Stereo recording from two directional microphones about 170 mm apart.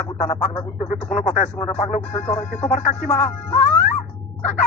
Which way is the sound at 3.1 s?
15° left (ahead or behind).